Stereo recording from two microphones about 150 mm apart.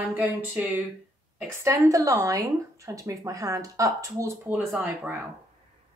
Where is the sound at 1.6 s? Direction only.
20° right (ahead or behind).